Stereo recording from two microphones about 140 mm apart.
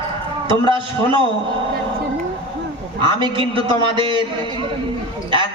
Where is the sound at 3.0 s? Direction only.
30° right (ahead or behind).